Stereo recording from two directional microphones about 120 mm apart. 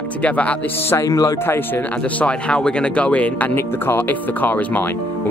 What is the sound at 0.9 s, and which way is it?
Speech, 25° left (ahead or behind).